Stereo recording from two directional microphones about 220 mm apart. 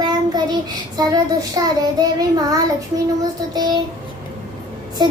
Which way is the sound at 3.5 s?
20° right (ahead or behind).